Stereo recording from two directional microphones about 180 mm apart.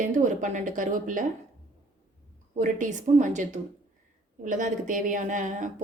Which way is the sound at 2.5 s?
45° right (ahead or behind).